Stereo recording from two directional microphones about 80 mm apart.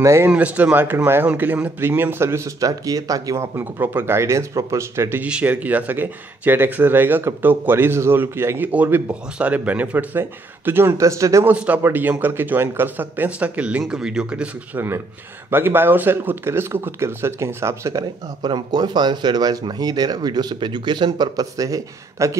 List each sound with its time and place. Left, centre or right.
0.0 s speech: right
0.3 s speech: centre; by 3.4 s right
3.5 s speech: right
5.2 s speech: centre; by 11.4 s right
11.4 s speech: centre
15.5 s speech: right
18.4 s speech: right